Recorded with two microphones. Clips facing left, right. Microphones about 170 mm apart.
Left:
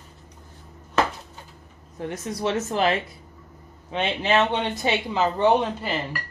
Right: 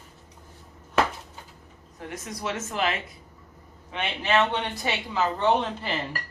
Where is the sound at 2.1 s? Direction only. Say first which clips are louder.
Left 6 dB; 30° left (ahead or behind); by 5.9 s 10° left (ahead or behind).